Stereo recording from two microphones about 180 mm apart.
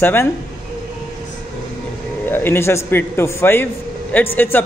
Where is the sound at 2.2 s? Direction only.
10° left (ahead or behind).